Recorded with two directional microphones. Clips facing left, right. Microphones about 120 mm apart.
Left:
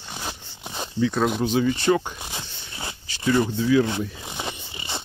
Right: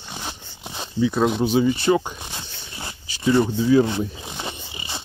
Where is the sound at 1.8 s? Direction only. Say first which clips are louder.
Right 2 dB; 10° right (ahead or behind).